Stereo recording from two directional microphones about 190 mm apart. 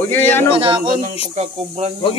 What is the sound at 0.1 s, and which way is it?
Speech, 10° left (ahead or behind).